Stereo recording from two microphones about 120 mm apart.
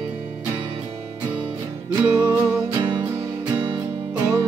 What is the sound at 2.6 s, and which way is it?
Music, 35° right (ahead or behind).